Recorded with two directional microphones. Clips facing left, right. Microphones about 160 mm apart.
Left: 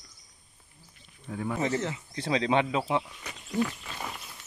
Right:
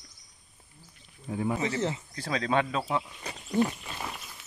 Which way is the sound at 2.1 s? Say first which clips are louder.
Left 3 dB; 20° left (ahead or behind).